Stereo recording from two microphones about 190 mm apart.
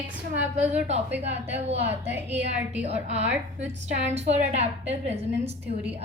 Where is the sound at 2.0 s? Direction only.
10° right (ahead or behind).